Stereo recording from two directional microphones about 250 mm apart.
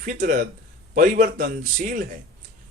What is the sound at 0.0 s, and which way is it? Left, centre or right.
Speech, right.